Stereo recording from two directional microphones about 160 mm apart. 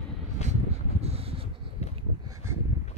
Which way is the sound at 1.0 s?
40° right (ahead or behind).